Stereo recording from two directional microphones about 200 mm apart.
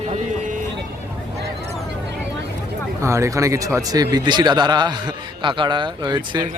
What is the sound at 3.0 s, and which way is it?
Speech, 15° right (ahead or behind).